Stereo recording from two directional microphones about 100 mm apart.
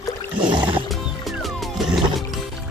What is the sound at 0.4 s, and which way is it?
Music, 50° right (ahead or behind).